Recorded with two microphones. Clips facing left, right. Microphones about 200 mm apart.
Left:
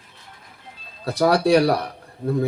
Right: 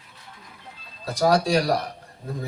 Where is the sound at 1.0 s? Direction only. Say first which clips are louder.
Left 3 dB; 60° left (ahead or behind).